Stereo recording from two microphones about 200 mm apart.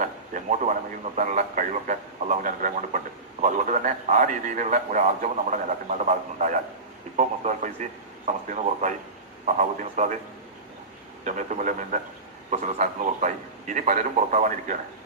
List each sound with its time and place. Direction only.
0.0 s a sound: 40° right (ahead or behind)
1.1 s a man's voice: 40° right (ahead or behind)
11.3 s a man's voice: 40° right (ahead or behind)